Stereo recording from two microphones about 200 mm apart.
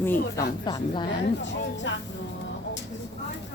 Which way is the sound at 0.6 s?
20° left (ahead or behind).